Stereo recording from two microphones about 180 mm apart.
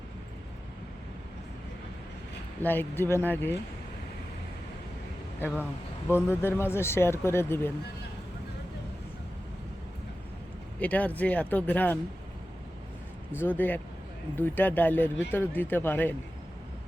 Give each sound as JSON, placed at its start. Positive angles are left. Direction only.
{"t": 2.6, "sound": "speech", "side_deg": 10}
{"t": 6.1, "sound": "speech", "side_deg": 15}
{"t": 10.8, "sound": "speech", "side_deg": 10}
{"t": 13.4, "sound": "speech", "side_deg": 10}